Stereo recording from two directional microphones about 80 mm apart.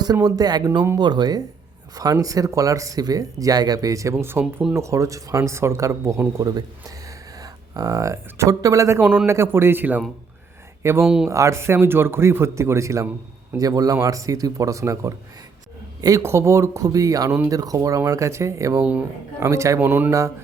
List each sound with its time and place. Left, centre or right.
0.0 s speech: right
2.2 s speech: right
4.7 s speech: right
6.5 s speech: right
11.0 s speech: centre
11.3 s speech: right
13.6 s speech: right
16.2 s speech: right
18.8 s speech: centre
19.4 s speech: right
19.8 s speech: right